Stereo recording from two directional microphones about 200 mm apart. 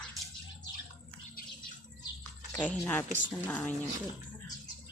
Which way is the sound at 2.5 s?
5° left (ahead or behind).